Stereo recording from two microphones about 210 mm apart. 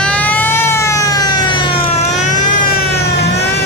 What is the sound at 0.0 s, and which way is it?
Siren, 5° left (ahead or behind).